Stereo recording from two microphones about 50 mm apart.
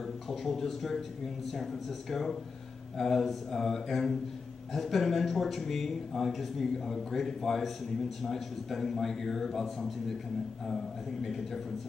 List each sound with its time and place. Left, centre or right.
0.3 s a man's voice: centre
11.2 s a man's voice: centre